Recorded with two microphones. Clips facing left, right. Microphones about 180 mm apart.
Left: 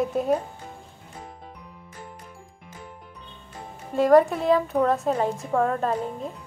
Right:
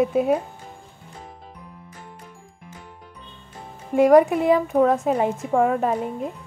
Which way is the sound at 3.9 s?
15° right (ahead or behind).